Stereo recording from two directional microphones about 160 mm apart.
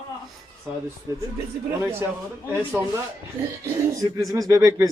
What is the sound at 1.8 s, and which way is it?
Speech, 15° right (ahead or behind).